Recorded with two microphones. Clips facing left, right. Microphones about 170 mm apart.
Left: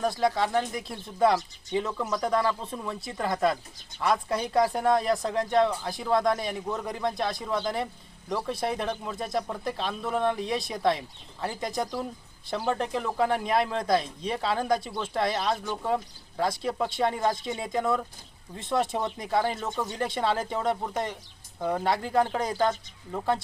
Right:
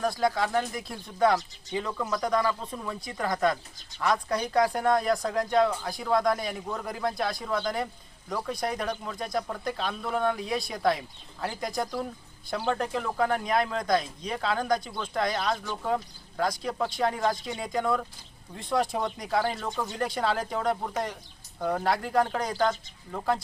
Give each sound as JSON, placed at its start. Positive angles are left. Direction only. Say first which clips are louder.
{"t": 0.0, "sound": "speech", "louder": "left 1 dB", "side_deg": 0}